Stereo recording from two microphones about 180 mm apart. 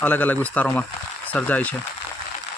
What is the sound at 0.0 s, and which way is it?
Speech, 10° left (ahead or behind).